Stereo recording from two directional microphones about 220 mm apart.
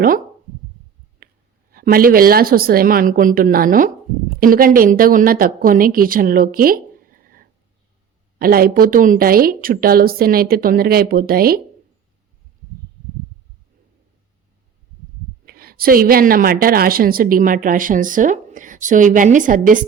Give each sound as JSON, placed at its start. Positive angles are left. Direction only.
{"t": 1.7, "sound": "a woman's voice", "side_deg": -40}
{"t": 15.4, "sound": "a woman's voice", "side_deg": -40}